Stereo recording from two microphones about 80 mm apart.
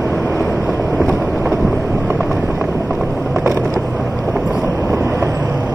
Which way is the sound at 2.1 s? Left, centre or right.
Centre.